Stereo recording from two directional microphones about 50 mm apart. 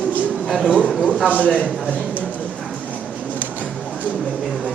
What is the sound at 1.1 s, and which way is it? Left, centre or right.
Speech, right.